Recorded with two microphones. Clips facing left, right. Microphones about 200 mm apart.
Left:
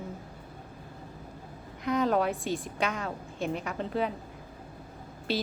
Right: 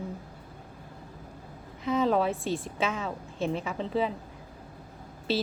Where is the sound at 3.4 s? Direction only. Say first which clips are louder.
Right 2 dB; 30° right (ahead or behind).